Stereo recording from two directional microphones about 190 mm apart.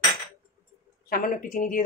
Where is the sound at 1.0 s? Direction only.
45° left (ahead or behind).